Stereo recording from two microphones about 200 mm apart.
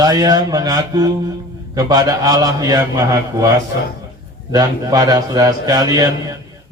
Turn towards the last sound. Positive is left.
turn(degrees=-20)  # may be behind; listen again after turning